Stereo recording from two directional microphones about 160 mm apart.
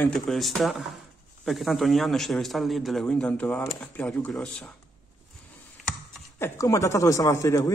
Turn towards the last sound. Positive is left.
turn(degrees=20)  # may be behind; listen again after turning